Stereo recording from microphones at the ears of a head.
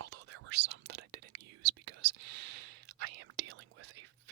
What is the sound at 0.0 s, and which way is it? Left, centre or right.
Whispering, right.